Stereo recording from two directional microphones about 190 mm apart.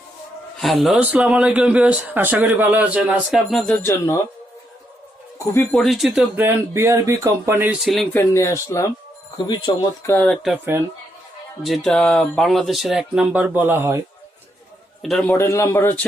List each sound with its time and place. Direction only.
0.6 s speech: centre (ahead or behind)
3.8 s speech: 15° left (ahead or behind)
5.7 s speech: centre (ahead or behind)
8.2 s speech: 15° left (ahead or behind)
10.2 s speech: centre (ahead or behind)
11.6 s speech: centre (ahead or behind)
15.0 s speech: centre (ahead or behind)
15.3 s speech: 15° left (ahead or behind)